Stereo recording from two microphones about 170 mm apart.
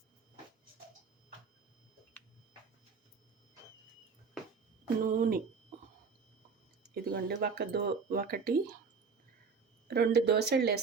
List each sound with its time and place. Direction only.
5.0 s speech: 55° right (ahead or behind)
6.9 s speech: 65° right (ahead or behind)
9.9 s speech: 70° right (ahead or behind)